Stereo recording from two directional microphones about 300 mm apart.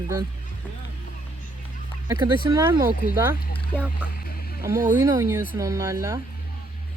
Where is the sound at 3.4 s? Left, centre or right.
Left.